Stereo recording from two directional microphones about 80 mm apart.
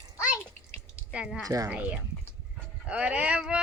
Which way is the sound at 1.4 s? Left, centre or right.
Right.